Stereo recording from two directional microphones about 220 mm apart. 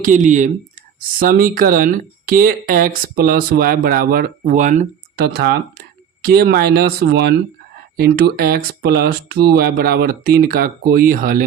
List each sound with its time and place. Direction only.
0.0 s speech: 35° right (ahead or behind)
5.2 s speech: 50° right (ahead or behind)